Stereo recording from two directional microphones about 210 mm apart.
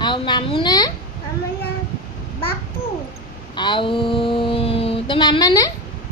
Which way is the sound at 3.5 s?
20° left (ahead or behind).